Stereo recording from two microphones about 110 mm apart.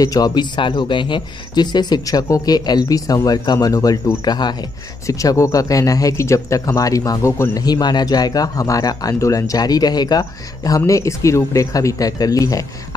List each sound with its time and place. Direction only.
0.0 s speech: 35° left (ahead or behind)
5.0 s speech: 30° left (ahead or behind)
7.6 s speech: 40° left (ahead or behind)